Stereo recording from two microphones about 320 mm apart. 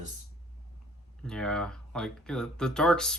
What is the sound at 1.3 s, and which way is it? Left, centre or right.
Speech, centre.